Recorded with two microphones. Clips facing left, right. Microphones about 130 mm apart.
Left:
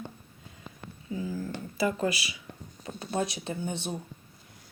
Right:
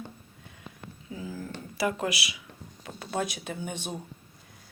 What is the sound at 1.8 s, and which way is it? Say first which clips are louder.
Speech: left 1 dB; 85° right.